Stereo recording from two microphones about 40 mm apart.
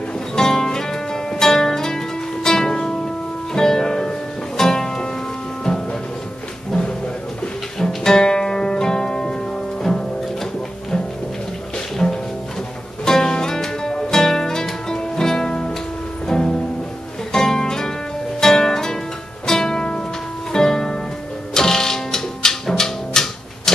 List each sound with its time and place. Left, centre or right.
0.4 s music: centre
6.7 s a sound: left
7.8 s music: centre
12.0 s music: centre